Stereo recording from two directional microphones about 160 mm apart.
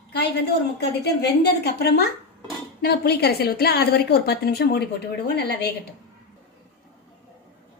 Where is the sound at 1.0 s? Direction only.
90° left.